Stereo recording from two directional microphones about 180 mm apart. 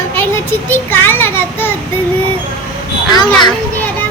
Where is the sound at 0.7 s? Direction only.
10° left (ahead or behind).